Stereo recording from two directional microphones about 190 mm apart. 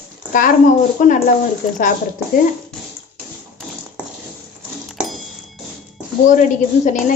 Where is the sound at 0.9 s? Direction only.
40° left (ahead or behind).